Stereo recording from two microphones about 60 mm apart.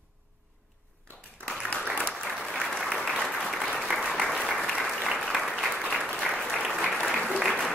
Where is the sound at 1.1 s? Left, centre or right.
Left.